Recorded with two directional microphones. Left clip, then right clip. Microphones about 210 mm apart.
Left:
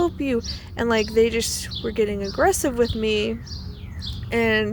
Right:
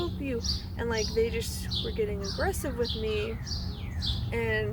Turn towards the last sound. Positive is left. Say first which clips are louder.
# left 9 dB
turn(degrees=45)  # may be behind; listen again after turning